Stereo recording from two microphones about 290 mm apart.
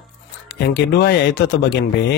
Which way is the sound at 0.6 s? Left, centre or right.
Left.